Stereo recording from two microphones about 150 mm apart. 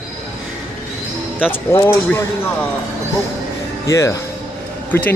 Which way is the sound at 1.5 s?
20° left (ahead or behind).